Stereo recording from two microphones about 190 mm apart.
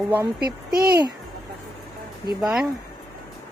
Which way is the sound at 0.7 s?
55° right (ahead or behind).